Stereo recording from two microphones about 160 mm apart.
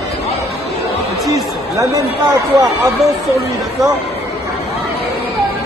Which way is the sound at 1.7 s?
20° right (ahead or behind).